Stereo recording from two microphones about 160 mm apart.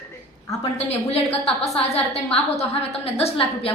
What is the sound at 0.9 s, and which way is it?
A woman's voice, 40° left (ahead or behind).